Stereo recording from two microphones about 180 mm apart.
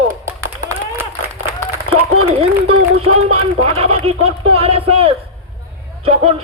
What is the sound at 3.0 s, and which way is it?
A man's voice, 30° right (ahead or behind).